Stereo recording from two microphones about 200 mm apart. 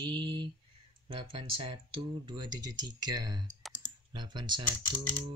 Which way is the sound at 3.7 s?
20° right (ahead or behind).